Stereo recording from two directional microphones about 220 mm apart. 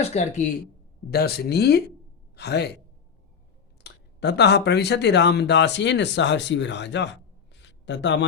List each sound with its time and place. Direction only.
0.0 s speech: 30° left (ahead or behind)
1.1 s a man's voice: 45° left (ahead or behind)
3.8 s speech: 50° left (ahead or behind)
7.6 s a sound: 55° left (ahead or behind)